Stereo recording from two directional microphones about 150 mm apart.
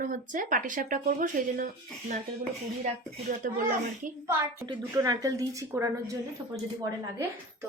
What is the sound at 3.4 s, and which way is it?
Speech, 65° right (ahead or behind).